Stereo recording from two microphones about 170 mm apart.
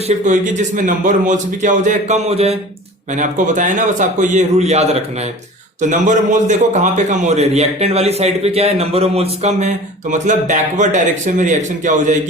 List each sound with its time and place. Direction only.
0.3 s a man's voice: 45° right (ahead or behind)
3.2 s a man's voice: 45° right (ahead or behind)